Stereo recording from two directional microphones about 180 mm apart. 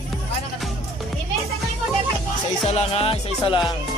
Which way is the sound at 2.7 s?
35° left (ahead or behind).